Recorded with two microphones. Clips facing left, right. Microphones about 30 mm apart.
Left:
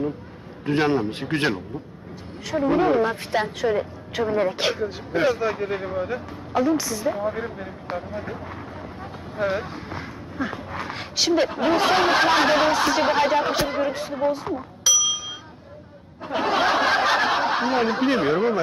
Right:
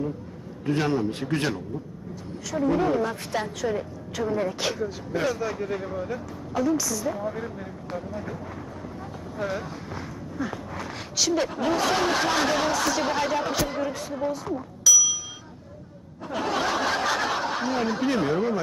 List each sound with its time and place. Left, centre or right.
0.6 s a woman's voice: left
9.4 s a woman's voice: left
14.8 s a sound: left
16.2 s snicker: left